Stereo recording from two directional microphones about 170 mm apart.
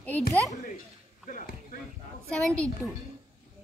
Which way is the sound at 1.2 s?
55° left (ahead or behind).